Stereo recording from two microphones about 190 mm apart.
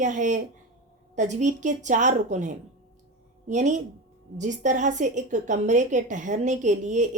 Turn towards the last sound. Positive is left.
turn(degrees=-40)  # may be behind; listen again after turning